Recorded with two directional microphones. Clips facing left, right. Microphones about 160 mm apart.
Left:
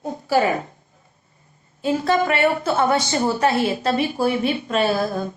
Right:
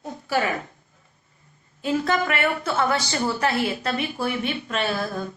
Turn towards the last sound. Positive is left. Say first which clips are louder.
# left 6 dB
turn(degrees=30)  # may be behind; listen again after turning